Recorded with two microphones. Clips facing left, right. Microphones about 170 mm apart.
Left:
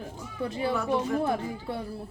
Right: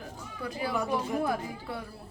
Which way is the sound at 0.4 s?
25° left (ahead or behind).